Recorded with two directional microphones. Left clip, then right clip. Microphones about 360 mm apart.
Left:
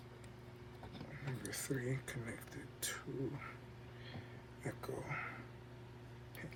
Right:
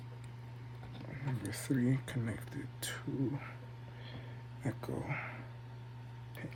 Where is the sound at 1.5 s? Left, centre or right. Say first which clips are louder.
Right 7 dB; right.